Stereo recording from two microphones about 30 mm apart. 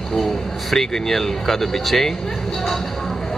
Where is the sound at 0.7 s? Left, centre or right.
Centre.